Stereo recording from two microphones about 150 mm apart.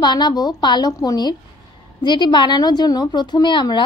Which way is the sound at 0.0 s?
30° left (ahead or behind).